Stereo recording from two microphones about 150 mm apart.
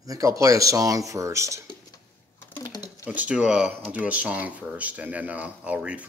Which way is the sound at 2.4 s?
15° left (ahead or behind).